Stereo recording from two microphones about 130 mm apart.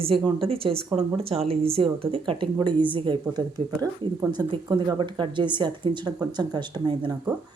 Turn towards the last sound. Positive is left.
turn(degrees=-35)  # may be behind; listen again after turning